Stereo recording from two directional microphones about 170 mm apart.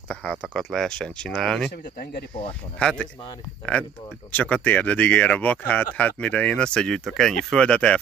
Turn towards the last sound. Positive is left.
turn(degrees=5)  # may be behind; listen again after turning